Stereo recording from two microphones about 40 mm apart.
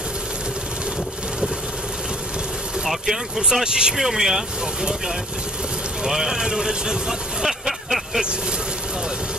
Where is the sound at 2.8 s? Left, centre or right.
Centre.